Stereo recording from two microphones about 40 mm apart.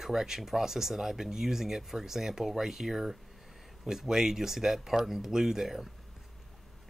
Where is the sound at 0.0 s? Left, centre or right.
Centre.